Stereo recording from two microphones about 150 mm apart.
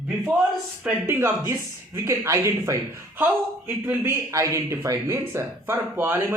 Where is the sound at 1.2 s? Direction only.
25° right (ahead or behind).